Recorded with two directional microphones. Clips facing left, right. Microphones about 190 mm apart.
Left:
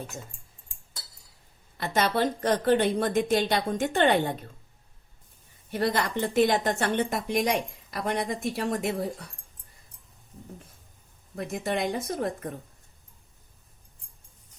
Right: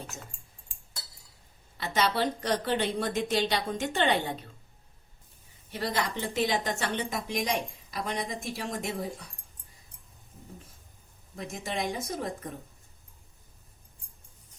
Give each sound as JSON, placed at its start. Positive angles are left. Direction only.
{"t": 1.8, "sound": "a woman's voice", "side_deg": 50}
{"t": 5.7, "sound": "a woman's voice", "side_deg": 55}
{"t": 11.3, "sound": "a woman's voice", "side_deg": 60}